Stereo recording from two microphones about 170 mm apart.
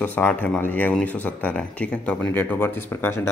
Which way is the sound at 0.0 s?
10° left (ahead or behind).